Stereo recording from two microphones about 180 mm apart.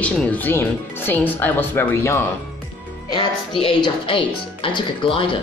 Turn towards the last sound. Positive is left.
turn(degrees=30)  # may be behind; listen again after turning